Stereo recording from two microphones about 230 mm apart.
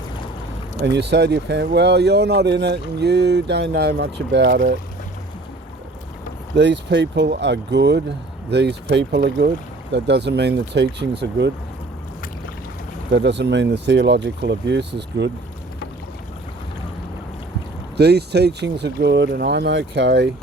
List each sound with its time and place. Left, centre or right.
0.8 s speech: right
6.6 s speech: right
13.1 s speech: right
17.9 s speech: right